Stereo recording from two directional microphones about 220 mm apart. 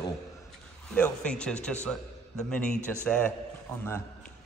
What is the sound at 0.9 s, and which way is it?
A man's voice, 5° left (ahead or behind).